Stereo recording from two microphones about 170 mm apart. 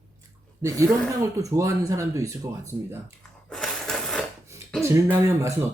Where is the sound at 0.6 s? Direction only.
15° right (ahead or behind).